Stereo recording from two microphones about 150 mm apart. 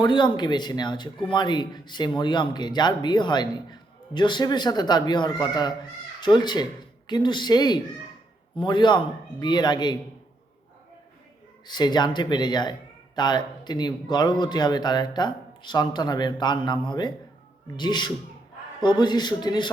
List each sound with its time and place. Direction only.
0.0 s speech: 30° left (ahead or behind)
11.6 s speech: 30° left (ahead or behind)